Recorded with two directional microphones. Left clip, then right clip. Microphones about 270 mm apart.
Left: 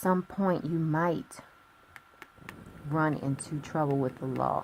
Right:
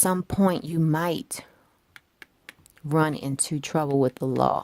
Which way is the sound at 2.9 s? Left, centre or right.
Right.